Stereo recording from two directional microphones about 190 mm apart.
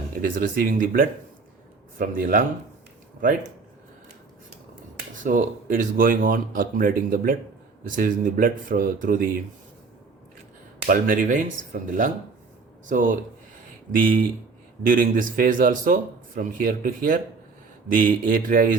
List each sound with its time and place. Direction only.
0.2 s speech: 50° right (ahead or behind)
5.2 s speech: 45° right (ahead or behind)
10.8 s speech: 45° right (ahead or behind)